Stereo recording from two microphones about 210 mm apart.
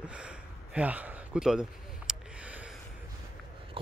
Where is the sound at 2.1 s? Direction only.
5° right (ahead or behind).